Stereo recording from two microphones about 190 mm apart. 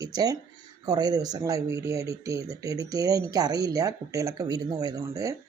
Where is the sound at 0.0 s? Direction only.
20° right (ahead or behind).